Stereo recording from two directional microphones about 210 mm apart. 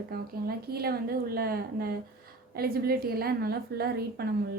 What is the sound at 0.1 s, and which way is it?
A woman's voice, 45° right (ahead or behind).